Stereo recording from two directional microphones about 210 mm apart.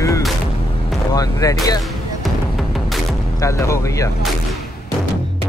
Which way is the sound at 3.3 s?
15° left (ahead or behind).